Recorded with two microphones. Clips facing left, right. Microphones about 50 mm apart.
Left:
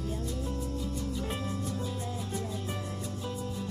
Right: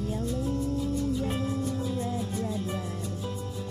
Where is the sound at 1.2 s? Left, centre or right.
Centre.